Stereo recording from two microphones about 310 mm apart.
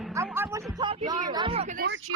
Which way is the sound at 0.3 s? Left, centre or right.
Centre.